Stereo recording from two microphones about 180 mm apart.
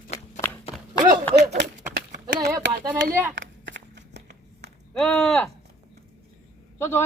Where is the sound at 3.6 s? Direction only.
80° right.